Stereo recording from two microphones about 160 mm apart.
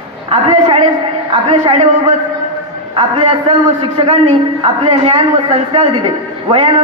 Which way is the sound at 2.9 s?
30° right (ahead or behind).